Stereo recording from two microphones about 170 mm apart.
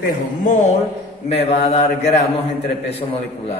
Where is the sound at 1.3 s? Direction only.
40° left (ahead or behind).